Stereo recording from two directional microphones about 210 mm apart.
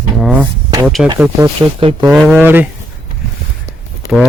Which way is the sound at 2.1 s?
5° right (ahead or behind).